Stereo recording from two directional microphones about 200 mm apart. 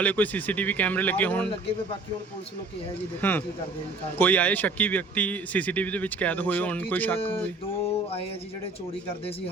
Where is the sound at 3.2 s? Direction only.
10° left (ahead or behind).